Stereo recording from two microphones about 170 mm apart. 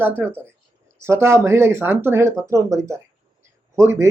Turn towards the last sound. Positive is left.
turn(degrees=-15)  # may be behind; listen again after turning